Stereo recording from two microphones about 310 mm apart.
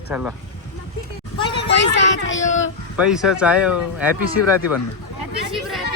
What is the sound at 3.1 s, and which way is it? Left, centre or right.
Speech, centre.